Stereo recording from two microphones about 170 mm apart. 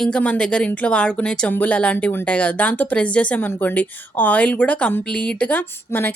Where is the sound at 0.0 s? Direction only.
5° left (ahead or behind).